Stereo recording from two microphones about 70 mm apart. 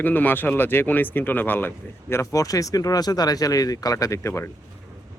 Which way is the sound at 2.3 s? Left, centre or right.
Left.